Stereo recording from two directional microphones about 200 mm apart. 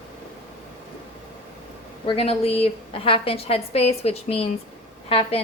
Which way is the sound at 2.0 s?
30° left (ahead or behind).